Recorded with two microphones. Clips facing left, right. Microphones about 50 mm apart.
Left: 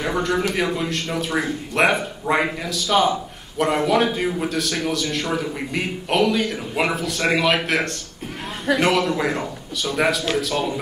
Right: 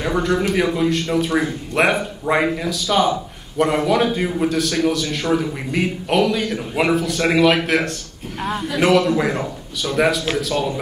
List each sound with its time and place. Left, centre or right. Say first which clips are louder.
0.0 s a man's voice: right 2 dB; centre